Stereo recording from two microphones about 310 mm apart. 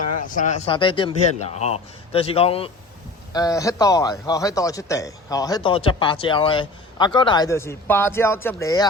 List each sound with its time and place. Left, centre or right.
0.2 s a man's voice: left